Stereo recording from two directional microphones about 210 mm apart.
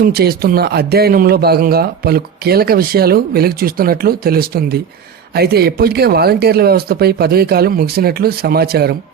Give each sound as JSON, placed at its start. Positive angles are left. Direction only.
{"t": 0.0, "sound": "a man's voice", "side_deg": -50}